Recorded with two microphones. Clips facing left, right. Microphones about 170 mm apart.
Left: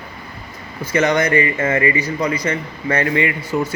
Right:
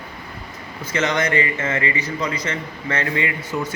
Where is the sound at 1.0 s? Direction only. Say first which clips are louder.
Left 4 dB; 35° left (ahead or behind).